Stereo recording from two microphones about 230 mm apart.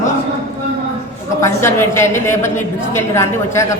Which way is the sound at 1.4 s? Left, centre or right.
Centre.